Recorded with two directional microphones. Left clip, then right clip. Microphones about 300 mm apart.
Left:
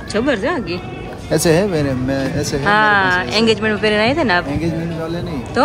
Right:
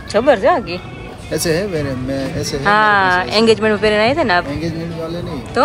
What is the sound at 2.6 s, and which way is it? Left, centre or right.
Speech, centre.